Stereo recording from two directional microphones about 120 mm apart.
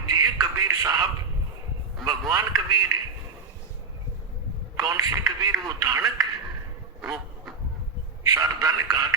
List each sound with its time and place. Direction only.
0.1 s a sound: 35° right (ahead or behind)
2.3 s a man's voice: 30° right (ahead or behind)
4.8 s a man's voice: 30° right (ahead or behind)
7.0 s duck: centre (ahead or behind)
8.2 s a man's voice: 30° right (ahead or behind)